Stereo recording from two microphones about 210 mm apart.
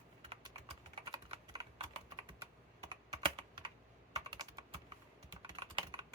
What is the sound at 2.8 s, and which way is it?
Computer keyboard, 20° right (ahead or behind).